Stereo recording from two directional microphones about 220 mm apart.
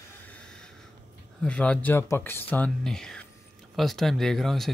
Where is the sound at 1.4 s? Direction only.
5° left (ahead or behind).